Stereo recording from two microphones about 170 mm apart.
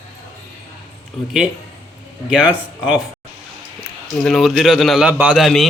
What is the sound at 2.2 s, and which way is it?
Speech, 5° right (ahead or behind).